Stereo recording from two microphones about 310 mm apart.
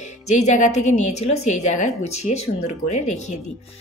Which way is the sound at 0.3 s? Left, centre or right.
Left.